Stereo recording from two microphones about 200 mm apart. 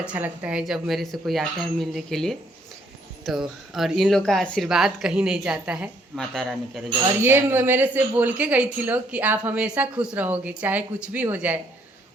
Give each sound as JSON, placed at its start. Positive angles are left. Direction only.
{"t": 0.0, "sound": "speech", "side_deg": -5}
{"t": 7.2, "sound": "a woman's voice", "side_deg": -10}